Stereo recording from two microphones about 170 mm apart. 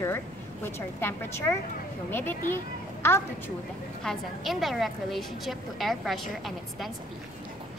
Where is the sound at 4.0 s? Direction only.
Centre (ahead or behind).